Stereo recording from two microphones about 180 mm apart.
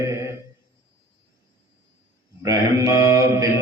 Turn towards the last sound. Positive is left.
turn(degrees=-15)  # may be behind; listen again after turning